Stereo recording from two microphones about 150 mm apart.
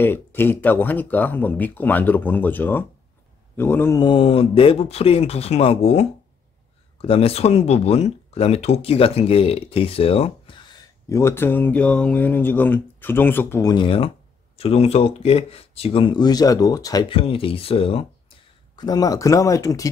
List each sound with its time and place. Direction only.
0.0 s speech: 15° left (ahead or behind)
4.0 s speech: 35° left (ahead or behind)
11.1 s speech: 20° left (ahead or behind)
13.7 s speech: 35° left (ahead or behind)
17.1 s speech: 40° left (ahead or behind)
18.8 s speech: 25° left (ahead or behind)